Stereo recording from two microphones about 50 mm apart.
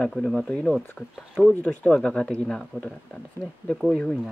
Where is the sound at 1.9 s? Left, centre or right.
Centre.